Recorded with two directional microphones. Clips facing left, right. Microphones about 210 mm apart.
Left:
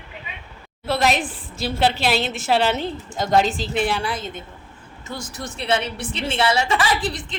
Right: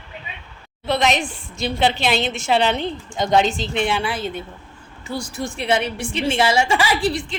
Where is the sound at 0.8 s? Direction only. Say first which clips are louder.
Right 1 dB; 5° left (ahead or behind).